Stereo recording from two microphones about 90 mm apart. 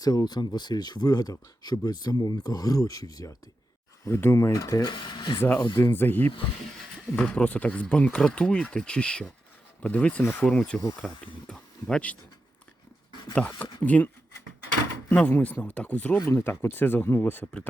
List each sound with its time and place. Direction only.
0.0 s speech: 45° left (ahead or behind)
4.1 s speech: 25° left (ahead or behind)
4.4 s speech: 35° left (ahead or behind)
4.9 s speech: 60° left (ahead or behind)
5.4 s speech: 25° left (ahead or behind)
7.1 s speech: 10° left (ahead or behind)
10.7 s speech: 5° right (ahead or behind)
11.4 s speech: 10° left (ahead or behind)
13.6 s speech: 15° left (ahead or behind)
15.1 s speech: 15° left (ahead or behind)
16.2 s speech: 30° left (ahead or behind)
17.4 s speech: 10° left (ahead or behind)